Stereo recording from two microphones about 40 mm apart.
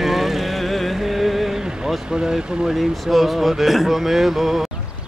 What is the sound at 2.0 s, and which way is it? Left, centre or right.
Speech, centre.